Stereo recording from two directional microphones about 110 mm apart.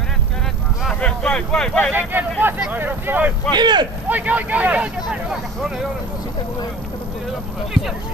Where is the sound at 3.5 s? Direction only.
40° right (ahead or behind).